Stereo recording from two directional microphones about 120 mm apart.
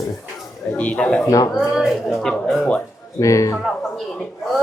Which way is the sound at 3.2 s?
25° left (ahead or behind).